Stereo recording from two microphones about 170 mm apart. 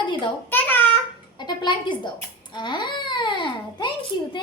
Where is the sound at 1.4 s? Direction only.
25° left (ahead or behind).